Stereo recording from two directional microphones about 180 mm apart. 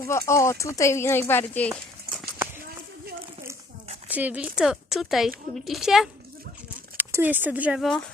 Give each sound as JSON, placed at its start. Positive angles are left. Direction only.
{"t": 0.0, "sound": "speech", "side_deg": 15}
{"t": 4.1, "sound": "speech", "side_deg": -10}